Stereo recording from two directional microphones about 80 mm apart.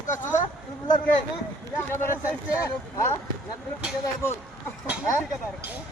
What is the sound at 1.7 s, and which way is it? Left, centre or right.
Speech, left.